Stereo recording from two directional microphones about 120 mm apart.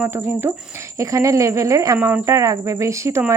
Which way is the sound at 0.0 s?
20° right (ahead or behind).